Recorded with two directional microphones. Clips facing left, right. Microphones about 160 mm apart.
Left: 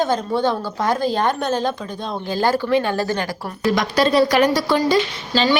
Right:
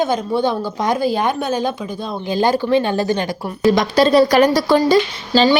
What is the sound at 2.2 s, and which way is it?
A woman's voice, 20° right (ahead or behind).